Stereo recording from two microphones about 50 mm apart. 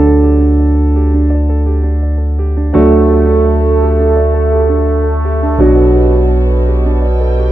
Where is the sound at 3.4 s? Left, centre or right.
Left.